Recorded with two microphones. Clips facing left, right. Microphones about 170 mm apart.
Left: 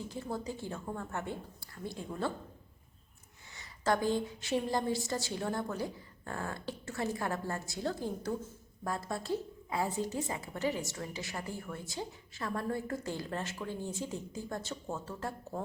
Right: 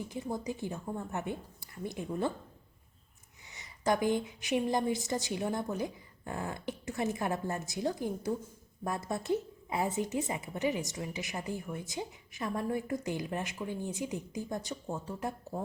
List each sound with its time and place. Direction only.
0.0 s a woman's voice: 15° right (ahead or behind)
3.5 s a woman's voice: 20° right (ahead or behind)